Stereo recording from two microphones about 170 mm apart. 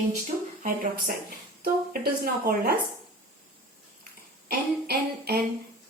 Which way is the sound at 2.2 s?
60° right (ahead or behind).